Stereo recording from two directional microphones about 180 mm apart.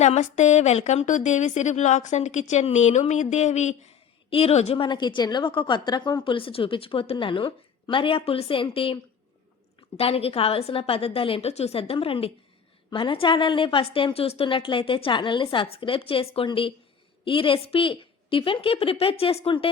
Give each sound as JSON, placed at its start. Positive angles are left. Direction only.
{"t": 0.0, "sound": "a woman's voice", "side_deg": 40}
{"t": 10.0, "sound": "a woman's voice", "side_deg": 35}